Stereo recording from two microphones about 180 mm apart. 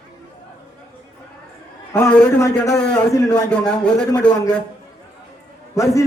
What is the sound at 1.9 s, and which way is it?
A man's voice, 10° left (ahead or behind).